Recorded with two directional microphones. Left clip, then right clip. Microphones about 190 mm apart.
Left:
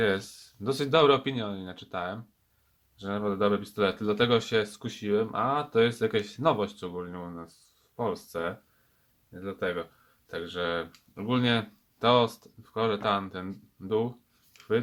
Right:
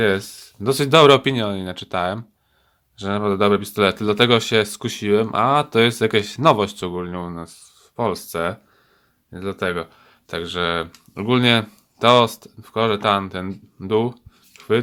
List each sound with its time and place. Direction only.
0.0 s speech: 25° right (ahead or behind)